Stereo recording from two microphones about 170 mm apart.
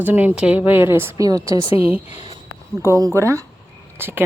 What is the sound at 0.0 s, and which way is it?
A woman's voice, 10° right (ahead or behind).